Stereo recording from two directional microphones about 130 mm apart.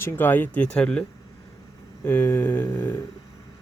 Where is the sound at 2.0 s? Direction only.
15° left (ahead or behind).